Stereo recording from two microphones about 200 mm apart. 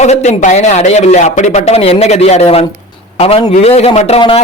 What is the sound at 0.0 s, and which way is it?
A man's voice, 35° left (ahead or behind).